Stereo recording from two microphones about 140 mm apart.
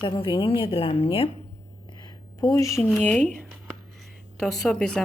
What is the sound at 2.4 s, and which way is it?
Speech, 25° left (ahead or behind).